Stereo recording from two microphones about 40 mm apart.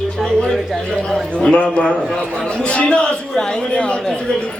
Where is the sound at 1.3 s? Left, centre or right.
Left.